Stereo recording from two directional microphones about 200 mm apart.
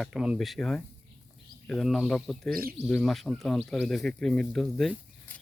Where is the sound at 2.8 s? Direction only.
Centre (ahead or behind).